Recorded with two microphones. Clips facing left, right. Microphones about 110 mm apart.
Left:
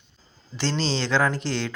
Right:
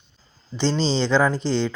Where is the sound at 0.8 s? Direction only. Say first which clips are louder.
Right 3 dB; centre (ahead or behind).